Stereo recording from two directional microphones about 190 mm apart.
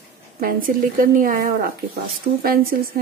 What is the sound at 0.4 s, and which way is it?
Speech, 50° right (ahead or behind).